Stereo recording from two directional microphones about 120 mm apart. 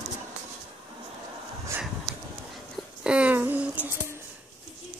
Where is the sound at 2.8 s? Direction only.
10° right (ahead or behind).